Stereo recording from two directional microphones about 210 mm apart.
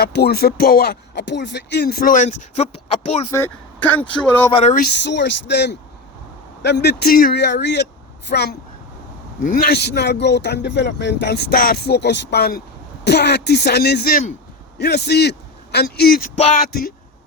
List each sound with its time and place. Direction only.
0.0 s speech: 50° left (ahead or behind); by 3.2 s 30° left (ahead or behind)
3.3 s speech: 10° left (ahead or behind)
4.5 s speech: 30° left (ahead or behind)
4.8 s speech: 55° left (ahead or behind)
14.8 s a man's voice: 50° left (ahead or behind)